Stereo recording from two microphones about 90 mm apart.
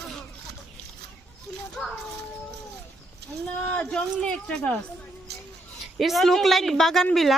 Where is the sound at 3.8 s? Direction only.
10° left (ahead or behind).